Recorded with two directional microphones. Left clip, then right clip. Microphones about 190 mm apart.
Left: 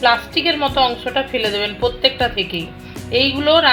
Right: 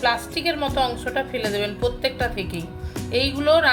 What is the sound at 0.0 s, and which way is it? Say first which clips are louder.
A woman's voice: left 7 dB; 30° left (ahead or behind).